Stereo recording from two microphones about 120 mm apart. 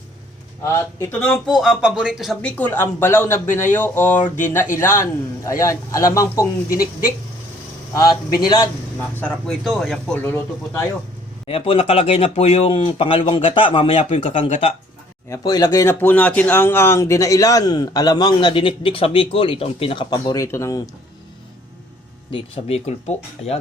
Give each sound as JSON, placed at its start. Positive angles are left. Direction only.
{"t": 0.6, "sound": "a man's voice", "side_deg": 20}
{"t": 1.5, "sound": "speech", "side_deg": 0}
{"t": 2.4, "sound": "a man's voice", "side_deg": 15}
{"t": 8.1, "sound": "speech", "side_deg": 40}
{"t": 9.0, "sound": "speech", "side_deg": 10}
{"t": 10.2, "sound": "speech", "side_deg": 15}
{"t": 11.4, "sound": "speech", "side_deg": 55}
{"t": 14.3, "sound": "speech", "side_deg": 85}
{"t": 15.3, "sound": "speech", "side_deg": 35}
{"t": 20.1, "sound": "a man's voice", "side_deg": 35}
{"t": 22.3, "sound": "speech", "side_deg": 50}
{"t": 23.0, "sound": "speech", "side_deg": 60}